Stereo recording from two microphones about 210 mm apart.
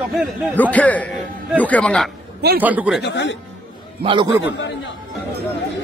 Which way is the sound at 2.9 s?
55° left (ahead or behind).